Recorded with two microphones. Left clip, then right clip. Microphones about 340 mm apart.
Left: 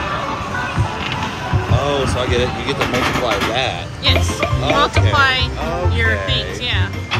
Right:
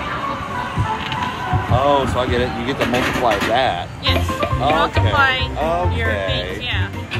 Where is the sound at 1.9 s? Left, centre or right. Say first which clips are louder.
Even; centre.